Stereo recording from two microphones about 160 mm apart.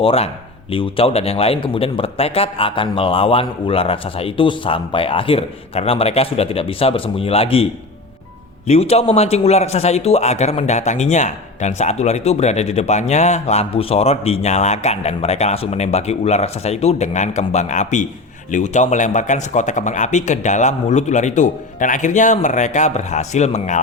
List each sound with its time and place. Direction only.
0.0 s a man's voice: 35° left (ahead or behind)